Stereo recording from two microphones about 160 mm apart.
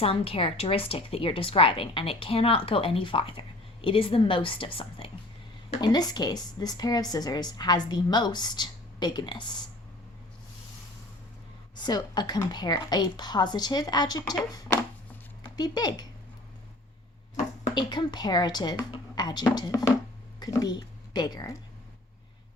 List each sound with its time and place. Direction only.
0.0 s a woman's voice: 35° left (ahead or behind)
11.8 s speech: 25° left (ahead or behind)
17.7 s speech: 30° left (ahead or behind)